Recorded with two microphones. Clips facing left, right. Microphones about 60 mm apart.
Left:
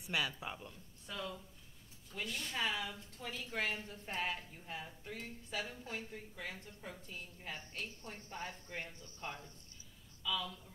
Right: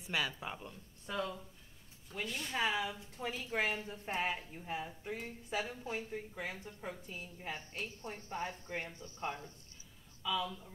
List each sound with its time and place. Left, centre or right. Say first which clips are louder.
0.0 s speech: right 1 dB; centre
2.1 s speech: right 3 dB; centre
3.2 s a woman's voice: right 4 dB; right